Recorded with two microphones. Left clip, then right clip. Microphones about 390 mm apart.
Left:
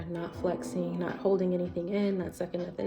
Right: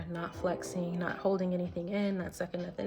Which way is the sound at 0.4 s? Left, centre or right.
Centre.